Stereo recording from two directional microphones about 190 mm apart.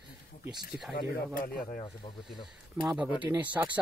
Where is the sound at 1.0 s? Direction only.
50° left (ahead or behind).